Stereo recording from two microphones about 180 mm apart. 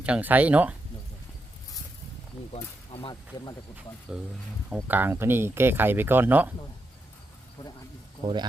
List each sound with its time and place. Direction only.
0.0 s speech: 10° right (ahead or behind)
2.9 s speech: 30° left (ahead or behind)
4.1 s speech: 5° right (ahead or behind)
8.2 s speech: 25° right (ahead or behind)